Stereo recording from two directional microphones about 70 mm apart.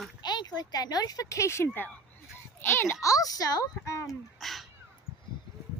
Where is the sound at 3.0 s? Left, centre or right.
Left.